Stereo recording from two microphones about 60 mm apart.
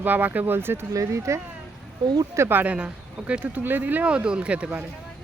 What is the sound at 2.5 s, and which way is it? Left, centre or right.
Speech, right.